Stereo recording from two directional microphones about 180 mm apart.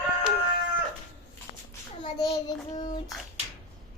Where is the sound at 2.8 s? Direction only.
25° left (ahead or behind).